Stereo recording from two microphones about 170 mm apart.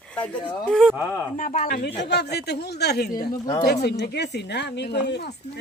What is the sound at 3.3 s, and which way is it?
Speech, 20° left (ahead or behind).